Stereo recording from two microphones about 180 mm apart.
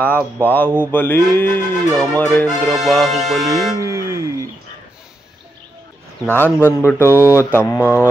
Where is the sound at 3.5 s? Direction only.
15° right (ahead or behind).